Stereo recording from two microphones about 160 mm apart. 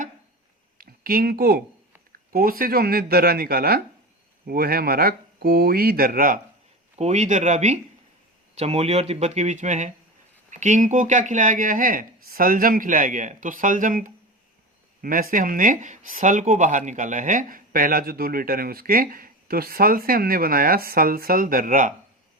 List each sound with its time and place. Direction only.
0.8 s speech: 65° right (ahead or behind)
7.0 s speech: 45° right (ahead or behind)